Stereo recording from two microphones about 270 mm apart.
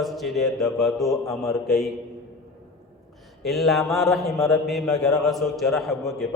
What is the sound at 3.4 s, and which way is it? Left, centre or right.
A man's voice, centre.